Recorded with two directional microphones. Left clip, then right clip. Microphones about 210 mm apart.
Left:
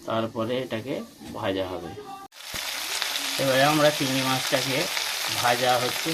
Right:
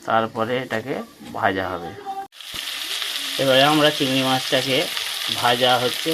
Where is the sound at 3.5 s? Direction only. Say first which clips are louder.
Right 4 dB; 15° right (ahead or behind).